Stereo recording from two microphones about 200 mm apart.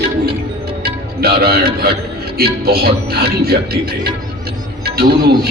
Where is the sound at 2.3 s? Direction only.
50° right (ahead or behind).